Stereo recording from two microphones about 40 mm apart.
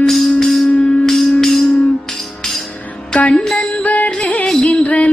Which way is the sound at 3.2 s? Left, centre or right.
Left.